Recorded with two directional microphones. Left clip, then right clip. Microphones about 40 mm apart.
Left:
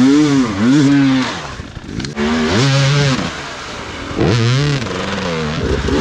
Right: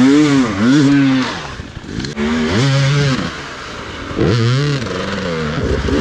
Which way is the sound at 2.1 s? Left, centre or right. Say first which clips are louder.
Left 2 dB; left.